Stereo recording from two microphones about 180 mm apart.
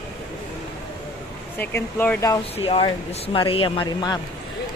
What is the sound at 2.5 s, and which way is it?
A man's voice, 30° left (ahead or behind).